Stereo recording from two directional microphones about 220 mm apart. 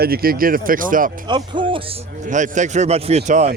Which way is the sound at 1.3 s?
20° right (ahead or behind).